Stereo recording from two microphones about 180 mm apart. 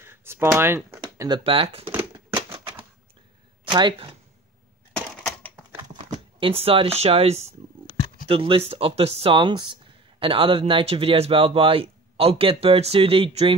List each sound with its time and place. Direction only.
0.0 s speech: 15° right (ahead or behind)
1.4 s speech: 30° right (ahead or behind)
3.7 s speech: 25° right (ahead or behind)
4.9 s typewriter: 10° left (ahead or behind)
6.1 s speech: 35° right (ahead or behind)